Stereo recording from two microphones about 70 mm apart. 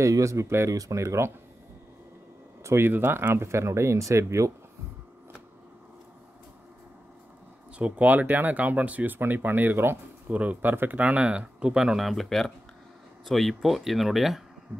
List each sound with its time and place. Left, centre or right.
0.0 s speech: right
2.6 s speech: right
7.8 s speech: right; by 14.4 s centre